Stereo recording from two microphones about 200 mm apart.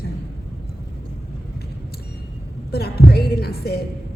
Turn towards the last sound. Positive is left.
turn(degrees=50)  # may be behind; listen again after turning